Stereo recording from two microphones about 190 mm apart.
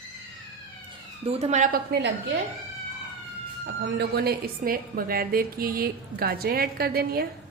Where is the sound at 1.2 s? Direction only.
30° right (ahead or behind).